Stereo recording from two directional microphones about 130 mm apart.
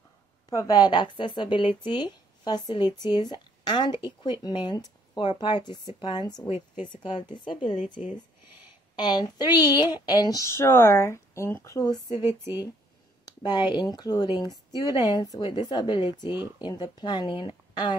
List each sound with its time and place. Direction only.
0.5 s speech: 30° left (ahead or behind)
8.9 s speech: 35° left (ahead or behind)
12.1 s speech: 20° right (ahead or behind)
13.2 s speech: 35° left (ahead or behind)